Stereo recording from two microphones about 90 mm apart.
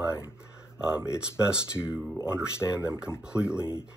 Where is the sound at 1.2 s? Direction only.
10° right (ahead or behind).